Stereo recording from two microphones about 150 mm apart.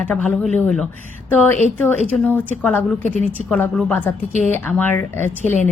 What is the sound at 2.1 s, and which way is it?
A woman's voice, 10° left (ahead or behind).